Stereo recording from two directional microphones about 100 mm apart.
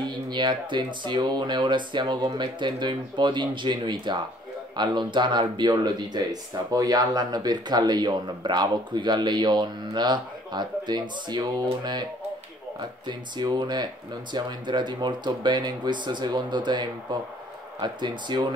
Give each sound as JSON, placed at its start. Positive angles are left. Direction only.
{"t": 0.0, "sound": "speech", "side_deg": -50}